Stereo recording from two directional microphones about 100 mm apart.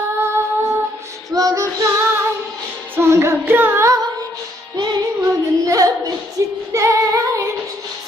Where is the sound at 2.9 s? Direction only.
25° right (ahead or behind).